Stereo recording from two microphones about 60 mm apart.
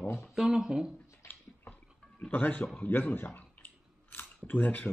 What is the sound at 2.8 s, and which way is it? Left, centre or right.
Chewing, left.